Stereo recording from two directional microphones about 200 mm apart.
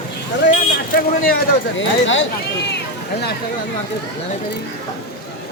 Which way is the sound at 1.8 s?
70° left (ahead or behind).